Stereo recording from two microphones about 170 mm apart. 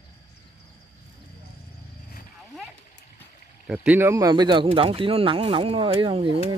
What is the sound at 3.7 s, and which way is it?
Speech, 5° right (ahead or behind).